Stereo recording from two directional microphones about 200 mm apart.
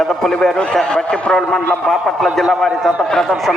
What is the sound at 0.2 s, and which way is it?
A man's voice, 5° left (ahead or behind).